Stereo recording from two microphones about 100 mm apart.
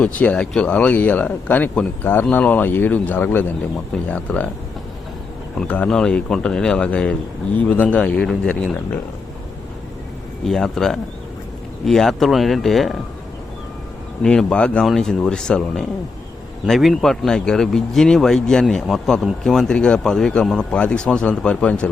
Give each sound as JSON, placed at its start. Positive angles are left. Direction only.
{"t": 0.0, "sound": "a man's voice", "side_deg": 15}
{"t": 5.5, "sound": "speech", "side_deg": 15}
{"t": 10.4, "sound": "speech", "side_deg": 5}
{"t": 14.2, "sound": "speech", "side_deg": 10}